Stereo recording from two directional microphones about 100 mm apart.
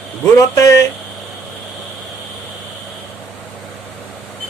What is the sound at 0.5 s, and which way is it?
Speech, 35° left (ahead or behind).